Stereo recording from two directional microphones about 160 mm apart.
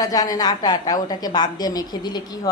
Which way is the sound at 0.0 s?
25° left (ahead or behind).